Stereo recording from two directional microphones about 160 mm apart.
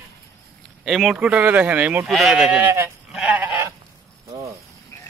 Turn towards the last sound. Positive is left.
turn(degrees=-10)  # may be behind; listen again after turning